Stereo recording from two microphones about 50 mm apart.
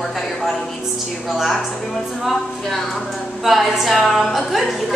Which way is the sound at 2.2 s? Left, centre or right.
Centre.